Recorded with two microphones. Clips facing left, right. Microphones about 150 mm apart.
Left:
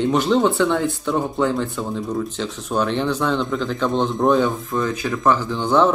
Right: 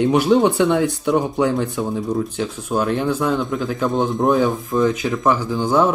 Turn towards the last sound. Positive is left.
turn(degrees=-10)  # may be behind; listen again after turning